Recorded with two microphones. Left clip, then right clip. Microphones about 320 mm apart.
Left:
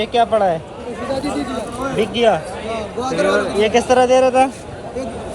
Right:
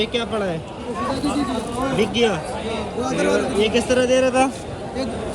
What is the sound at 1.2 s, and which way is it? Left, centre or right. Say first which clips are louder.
Speech: left 1 dB; left.